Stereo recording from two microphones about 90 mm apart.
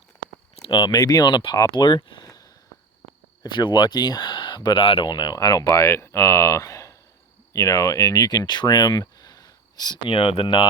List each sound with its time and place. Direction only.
0.6 s speech: 60° left (ahead or behind); by 2.5 s 40° left (ahead or behind)
3.4 s speech: 60° left (ahead or behind); by 5.1 s 75° left (ahead or behind)
5.1 s speech: 50° left (ahead or behind); by 10.6 s 80° left